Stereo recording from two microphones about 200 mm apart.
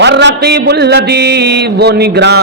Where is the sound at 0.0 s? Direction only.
60° right (ahead or behind).